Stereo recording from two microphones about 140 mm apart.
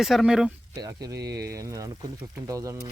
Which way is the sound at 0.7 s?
25° right (ahead or behind).